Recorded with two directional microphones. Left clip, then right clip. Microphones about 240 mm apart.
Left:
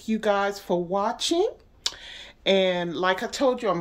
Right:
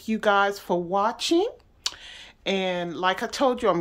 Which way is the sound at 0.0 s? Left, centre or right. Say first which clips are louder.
Right 2 dB; centre.